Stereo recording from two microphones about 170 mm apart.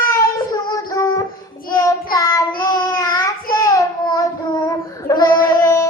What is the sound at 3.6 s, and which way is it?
Child singing, 20° left (ahead or behind).